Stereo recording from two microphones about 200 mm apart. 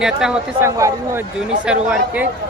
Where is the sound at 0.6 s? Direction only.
15° right (ahead or behind).